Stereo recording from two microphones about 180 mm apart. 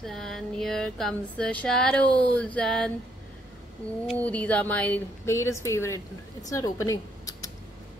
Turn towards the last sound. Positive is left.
turn(degrees=20)  # may be behind; listen again after turning